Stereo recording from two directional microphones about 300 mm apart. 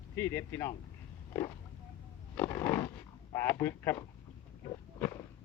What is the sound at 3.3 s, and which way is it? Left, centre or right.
Speech, centre.